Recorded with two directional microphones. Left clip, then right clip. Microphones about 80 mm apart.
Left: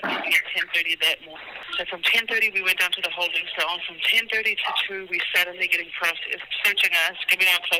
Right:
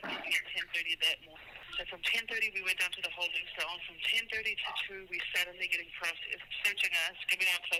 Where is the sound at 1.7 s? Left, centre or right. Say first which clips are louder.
Left 12 dB; left.